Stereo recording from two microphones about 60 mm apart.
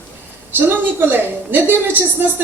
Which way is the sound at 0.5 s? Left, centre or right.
Right.